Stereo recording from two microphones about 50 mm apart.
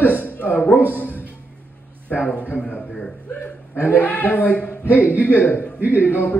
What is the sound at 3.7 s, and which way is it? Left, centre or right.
A man's voice, left.